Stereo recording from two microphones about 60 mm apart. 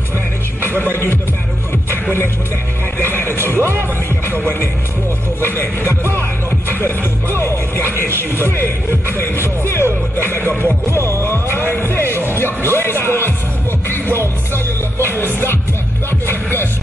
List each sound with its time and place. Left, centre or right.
0.9 s music: left
3.0 s music: left
5.4 s music: left
7.9 s a sound: left
9.2 s music: left
14.2 s music: right
15.0 s music: left